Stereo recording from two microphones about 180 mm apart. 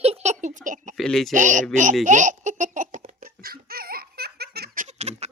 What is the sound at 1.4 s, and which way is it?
Speech, 45° right (ahead or behind).